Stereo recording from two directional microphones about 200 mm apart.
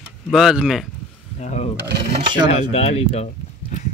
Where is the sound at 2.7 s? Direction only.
30° left (ahead or behind).